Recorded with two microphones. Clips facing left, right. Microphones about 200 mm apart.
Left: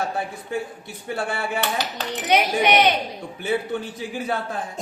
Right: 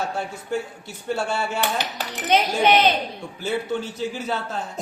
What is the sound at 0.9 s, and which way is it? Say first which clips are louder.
Speech: right 2 dB; 55° left (ahead or behind).